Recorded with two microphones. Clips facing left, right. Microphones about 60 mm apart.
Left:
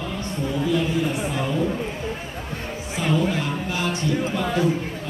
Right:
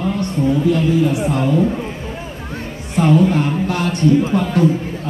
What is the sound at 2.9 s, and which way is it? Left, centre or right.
A man's voice, right.